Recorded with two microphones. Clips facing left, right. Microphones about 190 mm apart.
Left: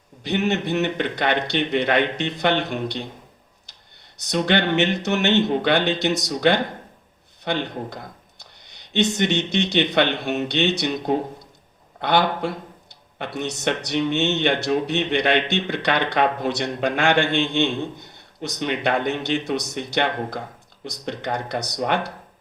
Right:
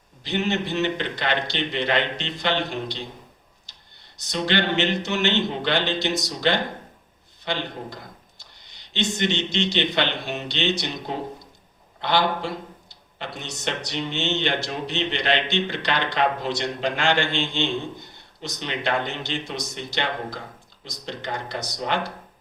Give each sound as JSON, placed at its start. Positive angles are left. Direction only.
{"t": 0.2, "sound": "a man's voice", "side_deg": 60}
{"t": 4.3, "sound": "a man's voice", "side_deg": 60}